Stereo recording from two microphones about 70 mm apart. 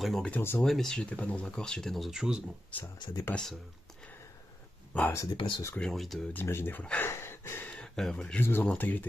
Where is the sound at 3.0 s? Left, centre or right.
Left.